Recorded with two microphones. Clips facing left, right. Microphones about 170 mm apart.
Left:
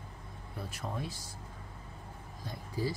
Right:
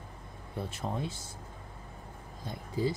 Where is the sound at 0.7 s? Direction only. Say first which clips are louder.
Right 2 dB; 25° right (ahead or behind).